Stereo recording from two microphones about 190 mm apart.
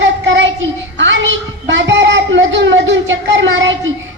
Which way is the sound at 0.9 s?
75° right (ahead or behind).